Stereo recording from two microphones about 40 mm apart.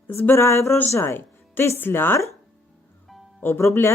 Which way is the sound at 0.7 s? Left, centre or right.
Left.